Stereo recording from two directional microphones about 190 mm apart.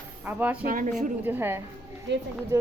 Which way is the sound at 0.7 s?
45° right (ahead or behind).